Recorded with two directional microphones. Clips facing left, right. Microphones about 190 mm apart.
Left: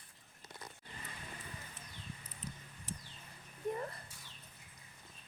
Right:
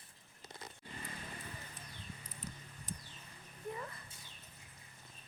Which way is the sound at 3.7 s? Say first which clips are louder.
Left 5 dB; 40° left (ahead or behind).